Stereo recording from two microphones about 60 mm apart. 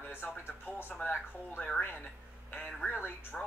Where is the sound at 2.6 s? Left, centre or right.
Left.